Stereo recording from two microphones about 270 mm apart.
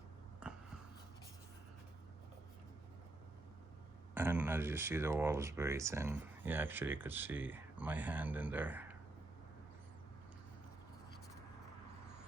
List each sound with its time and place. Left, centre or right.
4.1 s speech: centre